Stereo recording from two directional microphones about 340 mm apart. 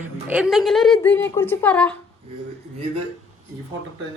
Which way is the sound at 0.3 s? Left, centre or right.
Centre.